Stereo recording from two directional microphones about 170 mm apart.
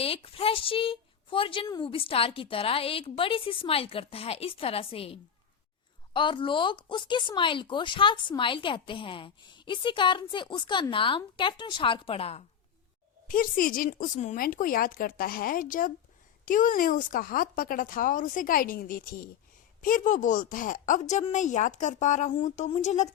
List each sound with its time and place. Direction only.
0.0 s a woman's voice: 35° left (ahead or behind)
13.2 s speech: 55° left (ahead or behind)